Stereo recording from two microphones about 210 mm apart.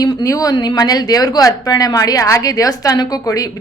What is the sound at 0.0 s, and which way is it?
Speech, 15° left (ahead or behind).